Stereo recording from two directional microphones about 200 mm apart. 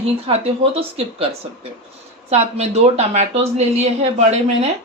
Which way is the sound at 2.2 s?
35° right (ahead or behind).